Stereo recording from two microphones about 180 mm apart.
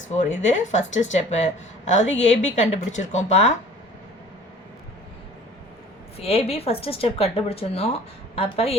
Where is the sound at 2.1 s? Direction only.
90° left.